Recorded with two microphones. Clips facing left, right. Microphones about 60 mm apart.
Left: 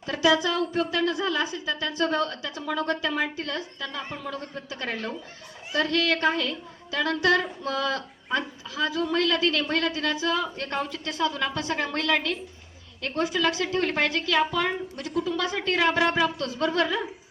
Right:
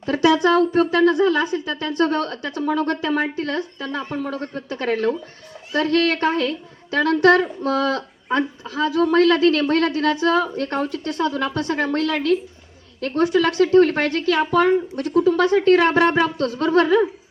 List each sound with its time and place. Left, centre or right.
0.0 s a woman's voice: right